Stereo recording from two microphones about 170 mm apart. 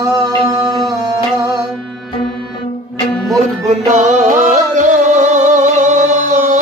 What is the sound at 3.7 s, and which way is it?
Music, 45° right (ahead or behind).